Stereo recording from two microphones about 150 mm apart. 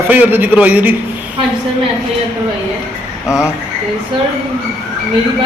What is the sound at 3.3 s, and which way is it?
Speech, 20° left (ahead or behind).